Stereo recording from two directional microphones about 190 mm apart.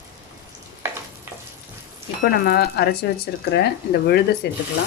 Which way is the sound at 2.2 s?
55° left (ahead or behind).